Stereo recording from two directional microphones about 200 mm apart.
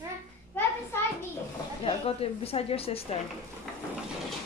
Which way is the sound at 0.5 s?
10° left (ahead or behind).